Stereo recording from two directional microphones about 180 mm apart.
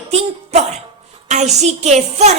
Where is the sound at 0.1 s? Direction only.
40° right (ahead or behind).